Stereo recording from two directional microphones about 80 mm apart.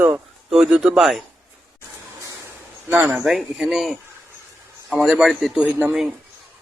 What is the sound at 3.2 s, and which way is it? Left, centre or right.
A man's voice, centre.